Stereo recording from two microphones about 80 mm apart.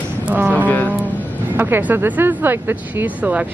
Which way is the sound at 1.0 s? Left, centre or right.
Right.